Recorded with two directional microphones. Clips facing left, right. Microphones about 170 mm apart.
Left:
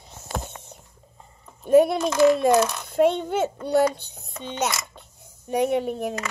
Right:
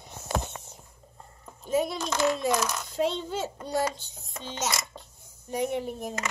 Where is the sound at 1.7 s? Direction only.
60° left (ahead or behind).